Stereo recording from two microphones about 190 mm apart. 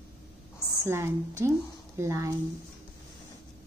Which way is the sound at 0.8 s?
15° right (ahead or behind).